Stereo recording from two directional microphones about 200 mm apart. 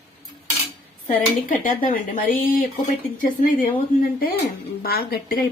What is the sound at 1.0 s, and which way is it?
Speech, 40° left (ahead or behind).